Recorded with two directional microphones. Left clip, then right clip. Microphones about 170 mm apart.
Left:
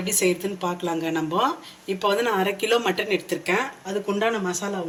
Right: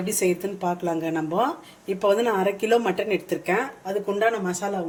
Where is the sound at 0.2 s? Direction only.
40° right (ahead or behind); by 4.5 s 60° right (ahead or behind).